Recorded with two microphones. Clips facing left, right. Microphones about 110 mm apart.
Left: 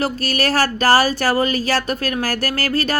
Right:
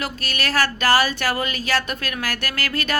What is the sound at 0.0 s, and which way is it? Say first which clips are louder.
Speech: left 7 dB; 40° left (ahead or behind).